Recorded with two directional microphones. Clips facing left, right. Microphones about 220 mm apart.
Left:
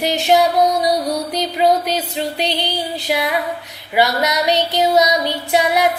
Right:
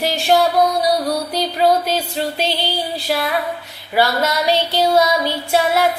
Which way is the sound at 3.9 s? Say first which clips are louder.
Even; 20° left (ahead or behind).